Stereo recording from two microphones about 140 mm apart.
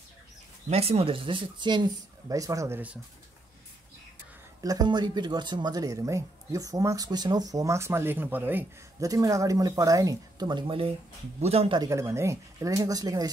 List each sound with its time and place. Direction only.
0.7 s speech: 45° right (ahead or behind); by 2.8 s 20° right (ahead or behind)
4.6 s speech: 30° right (ahead or behind); by 8.6 s 15° right (ahead or behind)
9.0 s speech: 25° right (ahead or behind)
11.4 s speech: 45° right (ahead or behind)
11.8 s speech: 20° right (ahead or behind)